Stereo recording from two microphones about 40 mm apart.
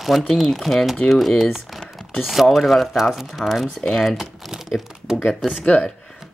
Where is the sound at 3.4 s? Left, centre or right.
Centre.